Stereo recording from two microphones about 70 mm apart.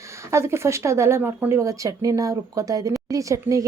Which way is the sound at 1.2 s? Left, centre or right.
Right.